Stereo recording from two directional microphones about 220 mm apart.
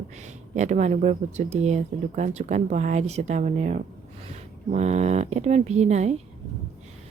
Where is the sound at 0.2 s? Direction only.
30° right (ahead or behind).